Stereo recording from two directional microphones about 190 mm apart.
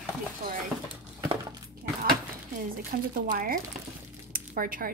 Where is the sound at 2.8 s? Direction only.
45° right (ahead or behind).